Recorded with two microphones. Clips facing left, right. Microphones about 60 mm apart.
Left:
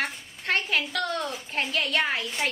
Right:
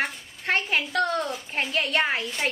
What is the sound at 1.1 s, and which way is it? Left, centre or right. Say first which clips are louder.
Speech: right 3 dB; centre.